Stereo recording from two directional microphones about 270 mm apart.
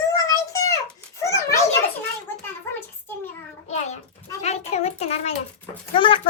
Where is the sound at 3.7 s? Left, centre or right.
Left.